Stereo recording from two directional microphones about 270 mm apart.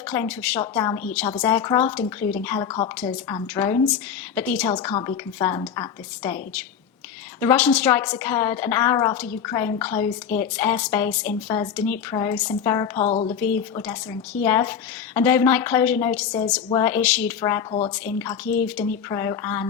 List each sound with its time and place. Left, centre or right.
0.1 s a woman's voice: centre
13.0 s a woman's voice: left
13.4 s a woman's voice: centre